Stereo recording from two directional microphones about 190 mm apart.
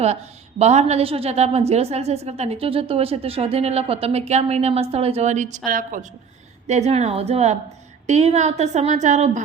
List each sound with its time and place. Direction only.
0.0 s a woman's voice: 35° right (ahead or behind)